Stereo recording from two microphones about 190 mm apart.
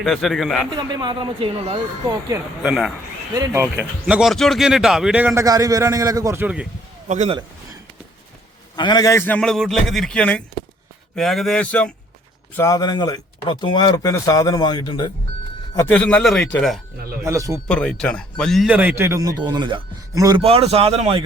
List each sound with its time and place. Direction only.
0.0 s speech: centre (ahead or behind)
0.8 s speech: 20° right (ahead or behind)
2.3 s speech: 5° right (ahead or behind)
3.3 s speech: 15° right (ahead or behind)
4.0 s speech: centre (ahead or behind)
7.1 s a man's voice: 40° right (ahead or behind)
8.7 s a man's voice: 20° left (ahead or behind); by 11.9 s 5° left (ahead or behind)
12.5 s speech: 15° left (ahead or behind)
15.7 s a man's voice: 10° left (ahead or behind)
17.2 s speech: 15° right (ahead or behind)
17.7 s speech: 5° left (ahead or behind); by 20.4 s 20° right (ahead or behind)
20.4 s a man's voice: 30° right (ahead or behind)